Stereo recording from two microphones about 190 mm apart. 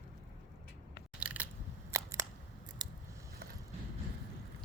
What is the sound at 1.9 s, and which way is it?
Camera, 15° right (ahead or behind).